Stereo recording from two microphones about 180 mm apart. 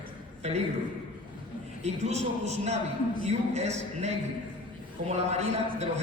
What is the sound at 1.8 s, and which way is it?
A man's voice, 40° right (ahead or behind).